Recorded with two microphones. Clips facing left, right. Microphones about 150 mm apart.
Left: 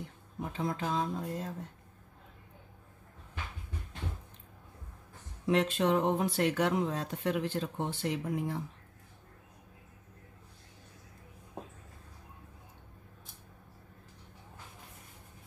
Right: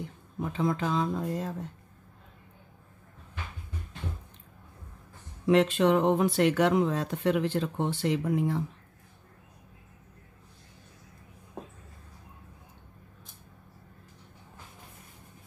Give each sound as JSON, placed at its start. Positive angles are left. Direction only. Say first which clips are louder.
{"t": 0.4, "sound": "speech", "louder": "right 6 dB", "side_deg": -90}
{"t": 5.5, "sound": "speech", "louder": "right 5 dB", "side_deg": -90}